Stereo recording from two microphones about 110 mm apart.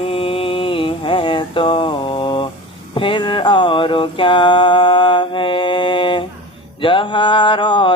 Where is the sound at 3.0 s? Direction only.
50° left (ahead or behind).